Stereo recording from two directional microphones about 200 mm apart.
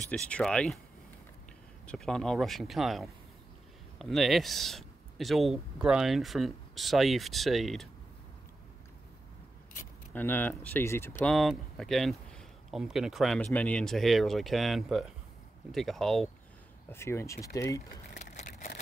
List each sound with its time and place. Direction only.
0.1 s speech: 5° left (ahead or behind)
1.9 s speech: centre (ahead or behind)
10.1 s speech: 10° left (ahead or behind)
16.9 s speech: 10° left (ahead or behind)
18.1 s a sound: 35° left (ahead or behind)